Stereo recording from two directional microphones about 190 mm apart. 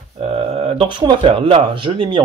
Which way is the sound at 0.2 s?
30° right (ahead or behind).